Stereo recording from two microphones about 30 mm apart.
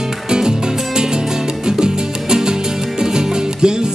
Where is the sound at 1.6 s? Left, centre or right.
Right.